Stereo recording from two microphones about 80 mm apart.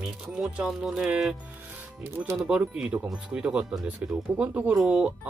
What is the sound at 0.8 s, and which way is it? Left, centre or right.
Music, centre.